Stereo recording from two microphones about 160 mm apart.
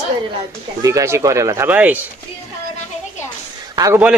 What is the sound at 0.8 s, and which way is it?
Speech, 20° right (ahead or behind).